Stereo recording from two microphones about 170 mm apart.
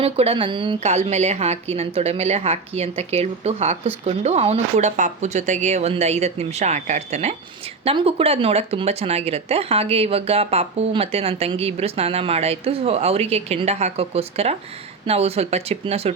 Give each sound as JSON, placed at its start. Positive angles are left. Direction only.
{"t": 0.0, "sound": "speech", "side_deg": -35}